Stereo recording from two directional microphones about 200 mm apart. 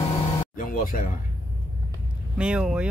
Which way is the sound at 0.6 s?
45° left (ahead or behind).